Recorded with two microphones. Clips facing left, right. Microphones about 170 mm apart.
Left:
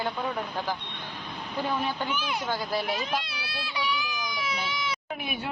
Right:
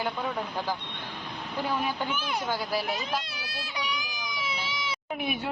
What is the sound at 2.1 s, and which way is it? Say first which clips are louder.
Speech: even; 50° right (ahead or behind).